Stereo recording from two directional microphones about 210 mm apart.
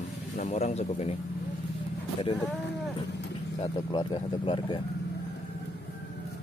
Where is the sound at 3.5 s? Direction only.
20° left (ahead or behind).